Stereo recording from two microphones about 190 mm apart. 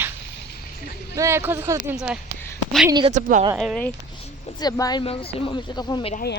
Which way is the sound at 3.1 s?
40° right (ahead or behind).